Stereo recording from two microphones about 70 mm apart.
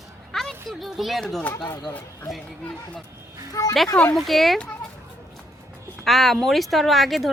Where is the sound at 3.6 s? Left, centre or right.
Left.